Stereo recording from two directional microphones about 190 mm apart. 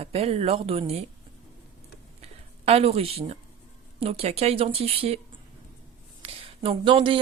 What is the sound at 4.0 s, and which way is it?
Speech, 30° right (ahead or behind).